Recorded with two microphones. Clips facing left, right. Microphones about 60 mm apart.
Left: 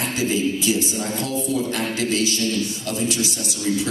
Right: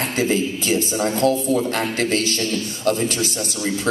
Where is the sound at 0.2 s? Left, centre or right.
Right.